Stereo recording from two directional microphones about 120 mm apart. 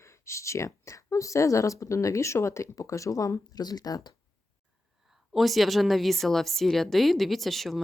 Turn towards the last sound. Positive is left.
turn(degrees=0)  # may be behind; listen again after turning